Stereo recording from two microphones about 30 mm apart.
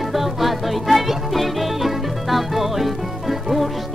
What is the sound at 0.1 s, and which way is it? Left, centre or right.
Music, centre.